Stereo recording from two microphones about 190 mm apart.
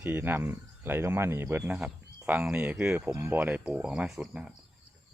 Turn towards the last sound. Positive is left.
turn(degrees=-5)  # may be behind; listen again after turning